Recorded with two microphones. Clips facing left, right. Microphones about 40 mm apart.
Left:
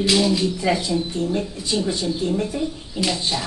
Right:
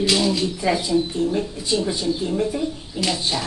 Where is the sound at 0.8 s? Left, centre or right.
Right.